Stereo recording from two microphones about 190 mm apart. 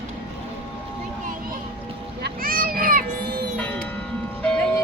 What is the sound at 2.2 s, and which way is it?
Children playing, 50° right (ahead or behind).